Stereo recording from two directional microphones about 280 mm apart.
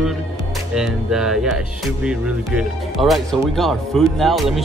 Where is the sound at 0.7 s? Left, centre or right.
Centre.